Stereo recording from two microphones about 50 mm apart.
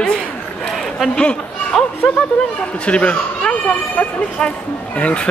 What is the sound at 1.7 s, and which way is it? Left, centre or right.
Speech, centre.